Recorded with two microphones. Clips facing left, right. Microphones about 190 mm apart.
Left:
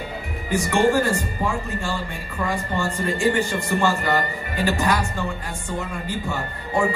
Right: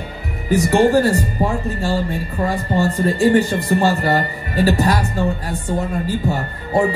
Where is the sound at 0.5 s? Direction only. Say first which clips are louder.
Right 5 dB; 35° right (ahead or behind).